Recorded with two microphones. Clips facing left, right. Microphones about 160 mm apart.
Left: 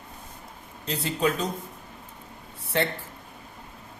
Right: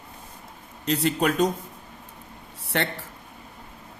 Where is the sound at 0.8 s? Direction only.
70° right (ahead or behind).